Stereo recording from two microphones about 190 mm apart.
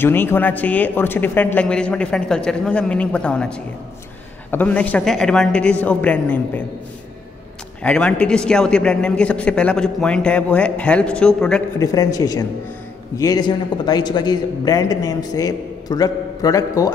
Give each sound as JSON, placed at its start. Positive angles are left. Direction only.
{"t": 0.0, "sound": "speech", "side_deg": 10}
{"t": 7.8, "sound": "a man's voice", "side_deg": 5}
{"t": 11.8, "sound": "a man's voice", "side_deg": 20}